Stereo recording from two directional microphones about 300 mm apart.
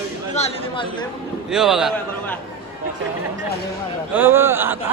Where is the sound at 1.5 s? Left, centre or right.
Centre.